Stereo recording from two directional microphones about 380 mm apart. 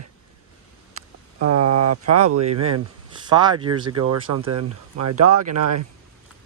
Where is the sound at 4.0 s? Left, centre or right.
Right.